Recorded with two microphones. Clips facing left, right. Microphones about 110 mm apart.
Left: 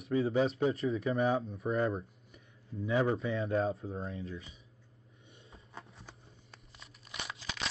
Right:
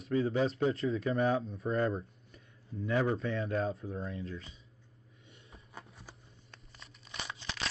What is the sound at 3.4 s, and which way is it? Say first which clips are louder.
Speech: left 2 dB; 25° left (ahead or behind).